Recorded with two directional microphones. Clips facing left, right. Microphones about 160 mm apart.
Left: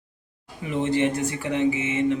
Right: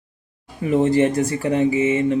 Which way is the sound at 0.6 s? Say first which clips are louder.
Right 6 dB; 40° right (ahead or behind).